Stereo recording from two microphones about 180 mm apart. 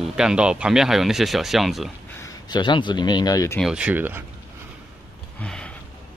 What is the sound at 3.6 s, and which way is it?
Speech, 5° right (ahead or behind).